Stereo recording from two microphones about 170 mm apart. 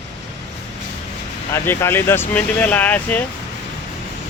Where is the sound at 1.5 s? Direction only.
15° left (ahead or behind).